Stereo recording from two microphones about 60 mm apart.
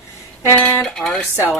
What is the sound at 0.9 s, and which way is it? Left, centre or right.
Speech, centre.